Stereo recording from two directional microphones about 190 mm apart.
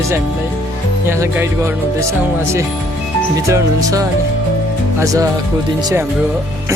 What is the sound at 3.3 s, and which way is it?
Speech, 15° right (ahead or behind).